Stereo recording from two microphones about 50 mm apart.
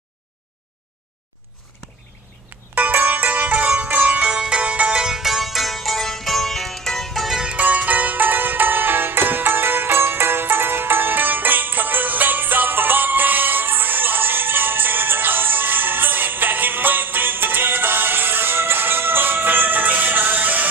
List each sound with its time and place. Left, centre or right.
2.7 s music: right
5.0 s music: centre
7.5 s music: right